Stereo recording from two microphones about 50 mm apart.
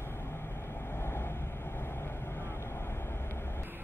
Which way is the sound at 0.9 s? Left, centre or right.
Left.